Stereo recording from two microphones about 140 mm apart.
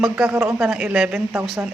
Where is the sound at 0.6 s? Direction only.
5° right (ahead or behind).